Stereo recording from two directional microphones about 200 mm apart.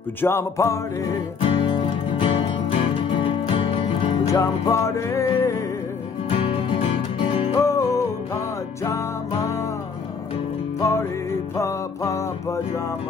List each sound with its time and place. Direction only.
0.2 s music: 10° left (ahead or behind)
1.4 s music: 25° left (ahead or behind)
4.3 s music: 15° left (ahead or behind)
6.3 s music: 30° left (ahead or behind)
7.6 s music: 15° left (ahead or behind)
10.8 s music: 15° left (ahead or behind)